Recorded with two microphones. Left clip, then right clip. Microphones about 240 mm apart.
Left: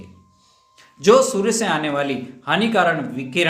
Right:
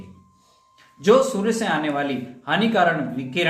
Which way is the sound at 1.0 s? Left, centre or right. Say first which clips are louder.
Left 3 dB; left.